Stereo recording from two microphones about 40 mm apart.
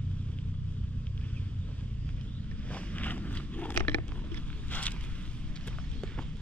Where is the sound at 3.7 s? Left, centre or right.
Left.